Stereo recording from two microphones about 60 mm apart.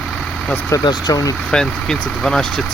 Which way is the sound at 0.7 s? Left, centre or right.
Left.